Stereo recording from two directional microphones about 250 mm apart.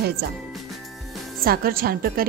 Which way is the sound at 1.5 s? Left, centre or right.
Right.